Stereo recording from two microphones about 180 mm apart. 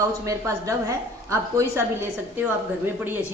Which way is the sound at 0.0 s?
15° right (ahead or behind).